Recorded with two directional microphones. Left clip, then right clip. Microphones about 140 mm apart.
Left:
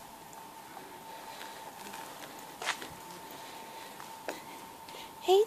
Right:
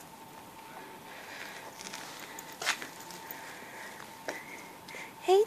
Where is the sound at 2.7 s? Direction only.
75° right (ahead or behind).